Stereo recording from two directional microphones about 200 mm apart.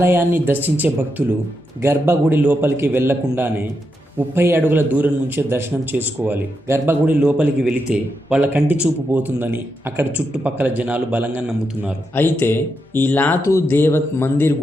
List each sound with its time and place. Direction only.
0.0 s a man's voice: 10° right (ahead or behind)
12.1 s speech: 10° left (ahead or behind)